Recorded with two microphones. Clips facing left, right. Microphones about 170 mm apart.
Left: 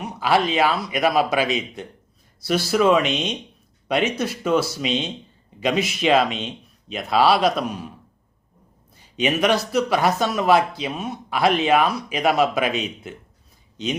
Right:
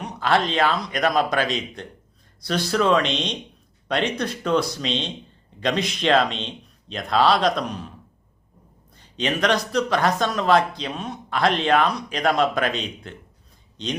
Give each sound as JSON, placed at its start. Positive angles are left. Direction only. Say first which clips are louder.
{"t": 0.0, "sound": "speech", "louder": "left 1 dB", "side_deg": 5}
{"t": 9.0, "sound": "speech", "louder": "left 3 dB", "side_deg": 10}